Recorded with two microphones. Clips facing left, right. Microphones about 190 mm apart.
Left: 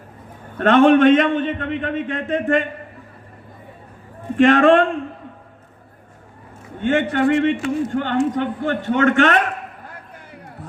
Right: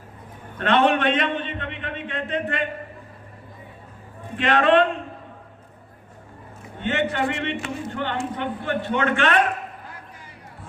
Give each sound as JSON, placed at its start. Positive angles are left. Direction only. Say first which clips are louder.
{"t": 0.6, "sound": "a man's voice", "louder": "left 8 dB", "side_deg": 45}
{"t": 4.4, "sound": "a man's voice", "louder": "left 5 dB", "side_deg": 45}
{"t": 6.8, "sound": "a man's voice", "louder": "left 6 dB", "side_deg": 50}